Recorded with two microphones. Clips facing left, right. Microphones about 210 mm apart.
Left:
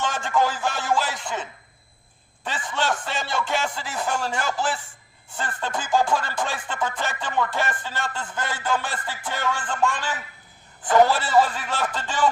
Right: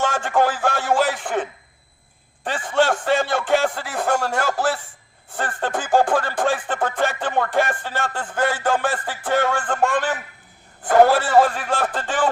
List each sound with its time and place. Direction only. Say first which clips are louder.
0.3 s speech: right 3 dB; 55° right (ahead or behind)
0.6 s a sound: right 5 dB; 55° right (ahead or behind)
2.4 s music: right 8 dB; 50° right (ahead or behind)